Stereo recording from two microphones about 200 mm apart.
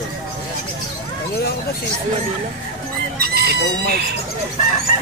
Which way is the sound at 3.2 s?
50° right (ahead or behind).